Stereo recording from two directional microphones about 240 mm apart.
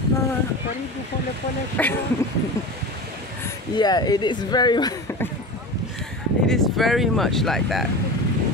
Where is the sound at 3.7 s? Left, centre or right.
Centre.